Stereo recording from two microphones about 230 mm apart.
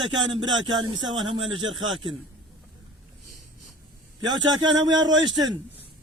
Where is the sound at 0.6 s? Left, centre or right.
Centre.